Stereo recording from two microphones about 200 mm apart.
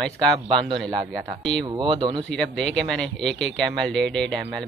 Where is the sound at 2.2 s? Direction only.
5° left (ahead or behind).